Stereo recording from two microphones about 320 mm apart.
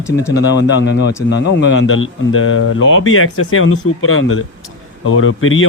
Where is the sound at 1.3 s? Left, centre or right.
Left.